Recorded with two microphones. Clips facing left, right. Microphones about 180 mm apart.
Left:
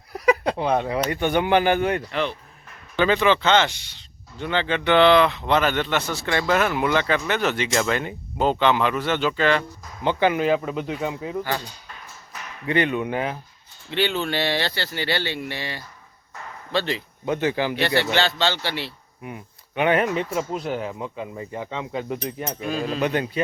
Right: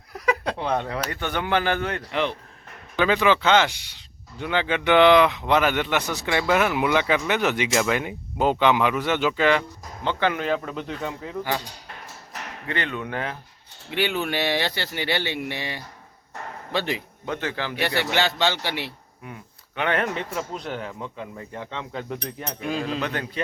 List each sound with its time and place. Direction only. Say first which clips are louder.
0.3 s a sound: left 4 dB; 10° left (ahead or behind)
1.1 s speech: left 5 dB; 15° left (ahead or behind)
2.9 s speech: left 1 dB; 5° right (ahead or behind)
10.0 s speech: left 4 dB; 10° left (ahead or behind)
12.6 s speech: left 7 dB; 15° left (ahead or behind)
13.9 s speech: left 1 dB; 10° right (ahead or behind)
17.2 s speech: left 6 dB; 10° left (ahead or behind)
17.7 s speech: left 2 dB; 10° right (ahead or behind)
19.2 s speech: left 4 dB; 10° left (ahead or behind)